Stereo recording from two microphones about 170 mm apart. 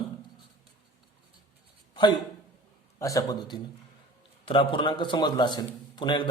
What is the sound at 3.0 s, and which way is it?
A man's voice, 20° left (ahead or behind).